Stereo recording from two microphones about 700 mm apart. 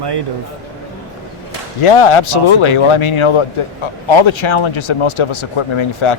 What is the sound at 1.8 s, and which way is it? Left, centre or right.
Speech, left.